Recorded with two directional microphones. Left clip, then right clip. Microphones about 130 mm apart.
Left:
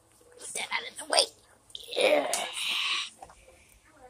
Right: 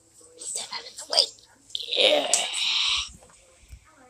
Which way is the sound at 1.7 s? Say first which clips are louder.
Right 4 dB; 10° right (ahead or behind).